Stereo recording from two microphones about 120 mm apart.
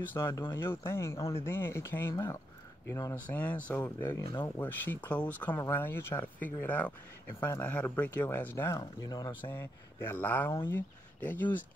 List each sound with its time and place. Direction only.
0.1 s speech: 20° left (ahead or behind)
4.2 s speech: 45° left (ahead or behind)
4.6 s speech: 15° left (ahead or behind)
7.6 s speech: 10° left (ahead or behind); by 9.5 s 35° left (ahead or behind)
9.5 s speech: 20° left (ahead or behind)